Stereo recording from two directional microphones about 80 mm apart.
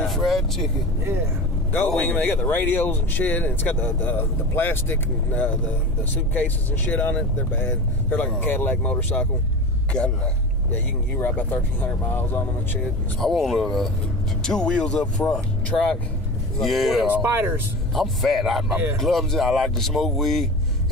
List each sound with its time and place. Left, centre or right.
0.0 s vehicle: centre
2.0 s speech: centre
11.1 s speech: left
13.2 s speech: centre
16.5 s speech: centre
17.2 s speech: right
17.9 s speech: centre